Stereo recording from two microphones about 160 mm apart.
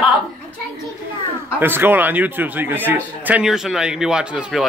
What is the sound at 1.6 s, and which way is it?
A man's voice, 15° right (ahead or behind).